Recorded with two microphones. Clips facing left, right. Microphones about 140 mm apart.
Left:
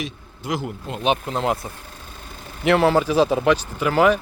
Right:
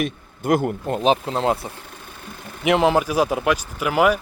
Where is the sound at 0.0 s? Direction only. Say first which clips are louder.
Right 6 dB; 55° right (ahead or behind).